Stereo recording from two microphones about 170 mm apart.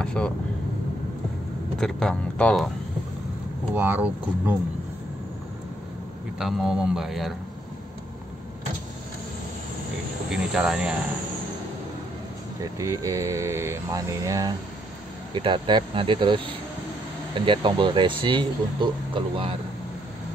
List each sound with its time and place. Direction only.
0.0 s vehicle: 5° left (ahead or behind)
1.8 s speech: 5° left (ahead or behind)
3.7 s speech: 10° right (ahead or behind)
6.4 s speech: 5° right (ahead or behind)
10.3 s speech: 5° right (ahead or behind)
12.7 s speech: 20° right (ahead or behind)